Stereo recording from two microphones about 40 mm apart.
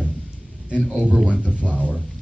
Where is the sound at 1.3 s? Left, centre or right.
Right.